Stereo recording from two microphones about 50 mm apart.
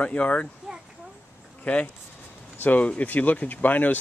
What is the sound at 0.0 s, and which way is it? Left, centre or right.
Speech, left.